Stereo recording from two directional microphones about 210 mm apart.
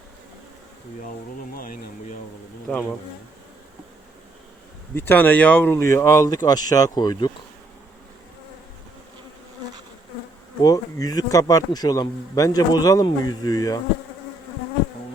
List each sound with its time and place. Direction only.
1.5 s a sound: 40° left (ahead or behind)
2.7 s bee: 5° left (ahead or behind)
4.9 s speech: 10° left (ahead or behind)
10.6 s speech: 15° left (ahead or behind)